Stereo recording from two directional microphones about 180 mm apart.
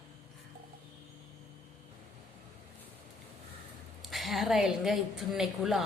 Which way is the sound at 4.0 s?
Centre (ahead or behind).